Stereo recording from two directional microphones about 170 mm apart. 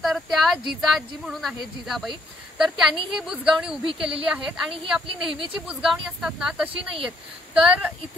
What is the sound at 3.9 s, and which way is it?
A woman's voice, 30° right (ahead or behind).